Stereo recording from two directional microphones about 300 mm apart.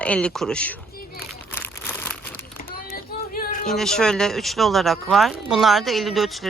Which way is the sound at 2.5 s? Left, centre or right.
Left.